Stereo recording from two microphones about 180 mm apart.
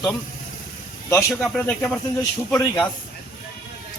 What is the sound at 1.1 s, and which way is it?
Speech, 15° left (ahead or behind).